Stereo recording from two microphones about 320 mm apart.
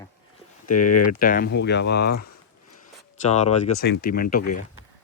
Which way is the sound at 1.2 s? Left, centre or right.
Left.